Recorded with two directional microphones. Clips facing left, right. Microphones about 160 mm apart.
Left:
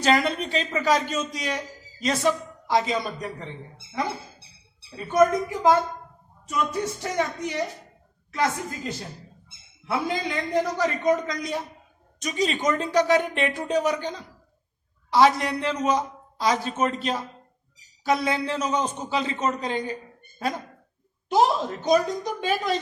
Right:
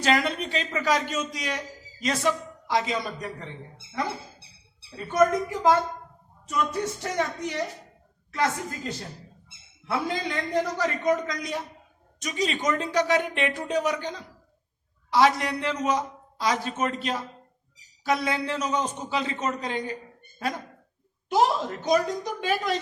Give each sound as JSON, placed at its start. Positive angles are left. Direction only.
{"t": 0.0, "sound": "a man's voice", "side_deg": 30}
{"t": 4.9, "sound": "a man's voice", "side_deg": 15}
{"t": 21.2, "sound": "a man's voice", "side_deg": 25}